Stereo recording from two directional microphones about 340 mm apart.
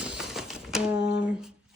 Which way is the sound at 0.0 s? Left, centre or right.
Centre.